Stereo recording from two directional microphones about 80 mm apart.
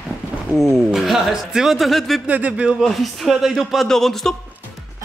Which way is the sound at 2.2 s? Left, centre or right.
Centre.